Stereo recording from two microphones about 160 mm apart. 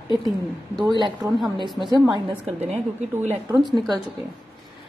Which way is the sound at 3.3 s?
15° right (ahead or behind).